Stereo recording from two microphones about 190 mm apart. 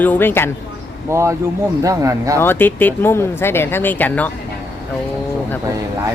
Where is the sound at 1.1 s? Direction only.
15° right (ahead or behind).